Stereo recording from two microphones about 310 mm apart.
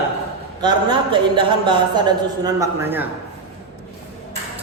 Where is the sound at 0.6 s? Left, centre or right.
Centre.